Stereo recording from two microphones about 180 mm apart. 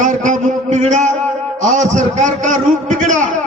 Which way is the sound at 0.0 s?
45° right (ahead or behind).